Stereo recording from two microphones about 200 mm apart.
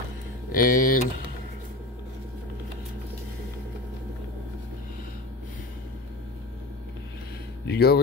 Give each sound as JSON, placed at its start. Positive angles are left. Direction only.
{"t": 0.5, "sound": "speech", "side_deg": 45}
{"t": 7.6, "sound": "speech", "side_deg": 55}